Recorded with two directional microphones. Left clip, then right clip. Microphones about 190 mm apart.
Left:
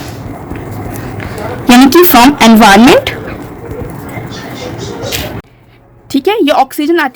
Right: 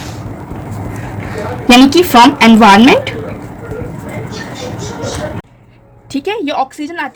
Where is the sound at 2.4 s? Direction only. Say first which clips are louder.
Left 1 dB; 50° left (ahead or behind).